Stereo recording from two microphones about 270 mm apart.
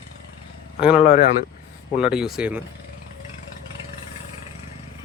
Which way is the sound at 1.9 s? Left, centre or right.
Centre.